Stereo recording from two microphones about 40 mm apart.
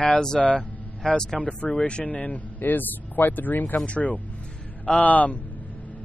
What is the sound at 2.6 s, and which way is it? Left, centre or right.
Speech, left.